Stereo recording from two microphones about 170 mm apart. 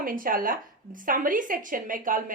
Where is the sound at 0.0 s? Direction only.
55° right (ahead or behind).